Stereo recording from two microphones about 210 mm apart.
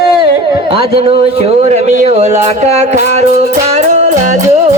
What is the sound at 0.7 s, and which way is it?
Speech, 25° right (ahead or behind).